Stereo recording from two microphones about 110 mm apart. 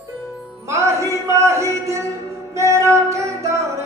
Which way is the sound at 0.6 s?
25° right (ahead or behind).